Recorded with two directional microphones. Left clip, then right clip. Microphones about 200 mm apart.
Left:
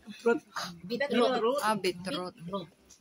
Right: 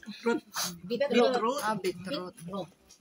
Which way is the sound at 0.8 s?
25° left (ahead or behind).